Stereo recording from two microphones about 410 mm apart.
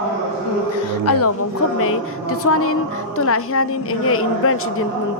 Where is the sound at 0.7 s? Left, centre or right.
Left.